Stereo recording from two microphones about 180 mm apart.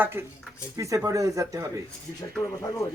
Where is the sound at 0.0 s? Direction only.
10° right (ahead or behind).